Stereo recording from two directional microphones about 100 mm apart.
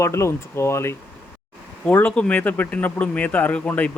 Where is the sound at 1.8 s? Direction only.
15° left (ahead or behind).